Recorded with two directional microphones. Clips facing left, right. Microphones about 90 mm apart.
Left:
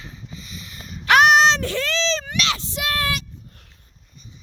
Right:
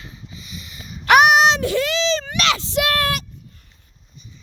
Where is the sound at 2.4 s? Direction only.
90° right; by 3.2 s 60° right (ahead or behind).